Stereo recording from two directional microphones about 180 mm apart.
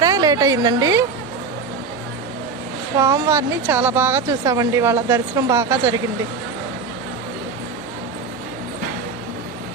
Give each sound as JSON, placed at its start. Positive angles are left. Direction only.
{"t": 0.0, "sound": "speech", "side_deg": -20}
{"t": 3.0, "sound": "speech", "side_deg": -15}